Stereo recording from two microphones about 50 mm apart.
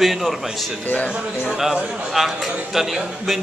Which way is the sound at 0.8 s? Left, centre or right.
Left.